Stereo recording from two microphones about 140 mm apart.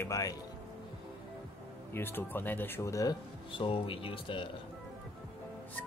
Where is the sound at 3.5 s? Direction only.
40° left (ahead or behind).